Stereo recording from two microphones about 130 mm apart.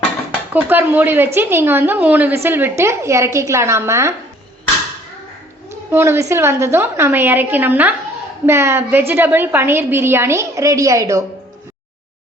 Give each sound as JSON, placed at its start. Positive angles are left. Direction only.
{"t": 0.5, "sound": "a woman's voice", "side_deg": -15}
{"t": 5.9, "sound": "a woman's voice", "side_deg": -20}